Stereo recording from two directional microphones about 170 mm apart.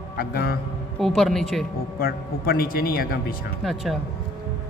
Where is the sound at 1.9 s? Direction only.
60° left (ahead or behind).